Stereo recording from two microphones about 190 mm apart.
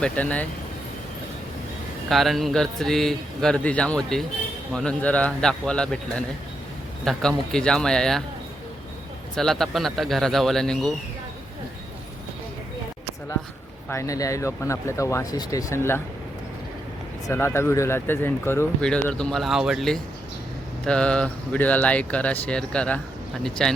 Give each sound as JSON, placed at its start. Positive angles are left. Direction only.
{"t": 0.0, "sound": "speech", "side_deg": 5}
{"t": 2.0, "sound": "speech", "side_deg": 0}
{"t": 9.3, "sound": "speech", "side_deg": 0}
{"t": 13.9, "sound": "speech", "side_deg": 15}
{"t": 17.2, "sound": "speech", "side_deg": 15}